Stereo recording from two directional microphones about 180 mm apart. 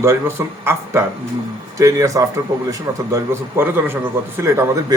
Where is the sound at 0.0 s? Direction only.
15° right (ahead or behind).